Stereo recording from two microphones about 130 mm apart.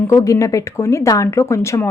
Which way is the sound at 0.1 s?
25° left (ahead or behind).